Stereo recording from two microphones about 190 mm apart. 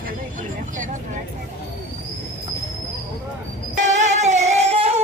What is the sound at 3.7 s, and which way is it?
Music, 40° right (ahead or behind).